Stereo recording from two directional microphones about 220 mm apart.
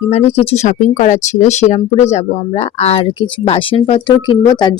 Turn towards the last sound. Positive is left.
turn(degrees=20)  # may be behind; listen again after turning